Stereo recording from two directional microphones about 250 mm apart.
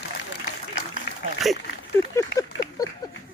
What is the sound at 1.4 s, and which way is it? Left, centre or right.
Speech, centre.